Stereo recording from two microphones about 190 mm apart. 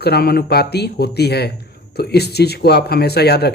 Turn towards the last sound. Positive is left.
turn(degrees=60)  # may be behind; listen again after turning